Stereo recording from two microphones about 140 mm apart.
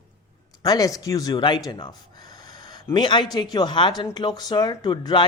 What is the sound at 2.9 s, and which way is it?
Speech, 35° left (ahead or behind).